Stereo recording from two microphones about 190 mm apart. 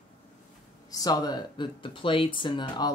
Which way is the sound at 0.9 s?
20° left (ahead or behind).